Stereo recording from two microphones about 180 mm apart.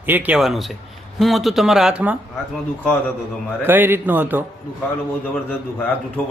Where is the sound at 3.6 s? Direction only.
10° right (ahead or behind).